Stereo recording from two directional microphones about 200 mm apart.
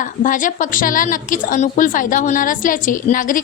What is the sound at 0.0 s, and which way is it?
A woman's voice, 40° left (ahead or behind).